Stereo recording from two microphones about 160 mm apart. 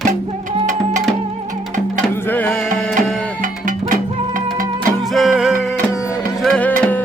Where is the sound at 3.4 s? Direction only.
55° right (ahead or behind).